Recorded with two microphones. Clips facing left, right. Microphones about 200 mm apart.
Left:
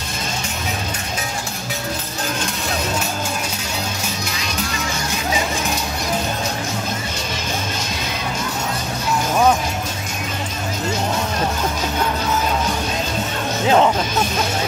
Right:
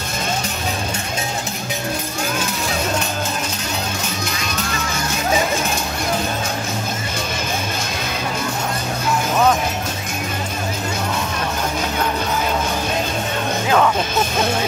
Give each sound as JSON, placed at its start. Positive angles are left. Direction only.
{"t": 13.7, "sound": "music", "side_deg": 25}